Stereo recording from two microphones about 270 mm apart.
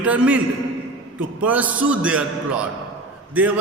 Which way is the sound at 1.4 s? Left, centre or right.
Centre.